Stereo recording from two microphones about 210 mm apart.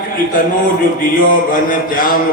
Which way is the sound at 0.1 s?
40° left (ahead or behind).